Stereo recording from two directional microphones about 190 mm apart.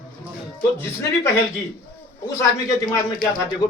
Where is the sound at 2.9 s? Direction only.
20° left (ahead or behind).